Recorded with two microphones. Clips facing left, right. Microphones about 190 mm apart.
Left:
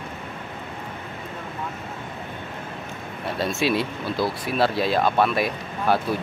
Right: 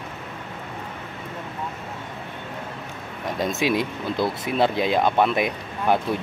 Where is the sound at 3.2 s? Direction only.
15° right (ahead or behind).